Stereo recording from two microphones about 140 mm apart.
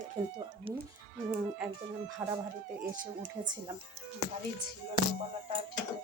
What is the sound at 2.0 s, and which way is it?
Speech, 20° right (ahead or behind).